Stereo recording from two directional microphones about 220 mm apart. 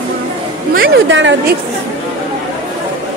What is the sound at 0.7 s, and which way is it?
Speech, 50° right (ahead or behind).